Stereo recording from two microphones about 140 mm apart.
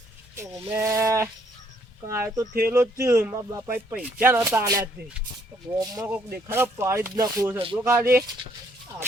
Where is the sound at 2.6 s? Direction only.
15° right (ahead or behind).